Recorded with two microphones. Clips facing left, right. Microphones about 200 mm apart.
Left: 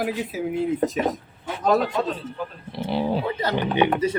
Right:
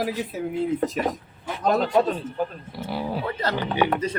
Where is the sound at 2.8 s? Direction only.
25° left (ahead or behind).